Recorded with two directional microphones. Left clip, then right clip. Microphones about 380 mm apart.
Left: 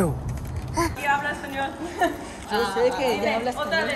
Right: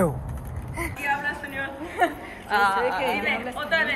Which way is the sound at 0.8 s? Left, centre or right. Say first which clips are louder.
Left 4 dB; centre.